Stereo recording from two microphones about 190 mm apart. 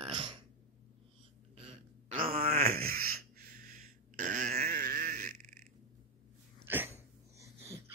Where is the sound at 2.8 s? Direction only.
50° right (ahead or behind).